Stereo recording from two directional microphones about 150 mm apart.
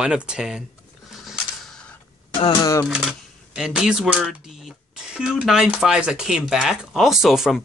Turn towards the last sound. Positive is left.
turn(degrees=0)  # may be behind; listen again after turning